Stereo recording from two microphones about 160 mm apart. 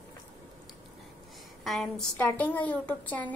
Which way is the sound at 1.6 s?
Centre (ahead or behind).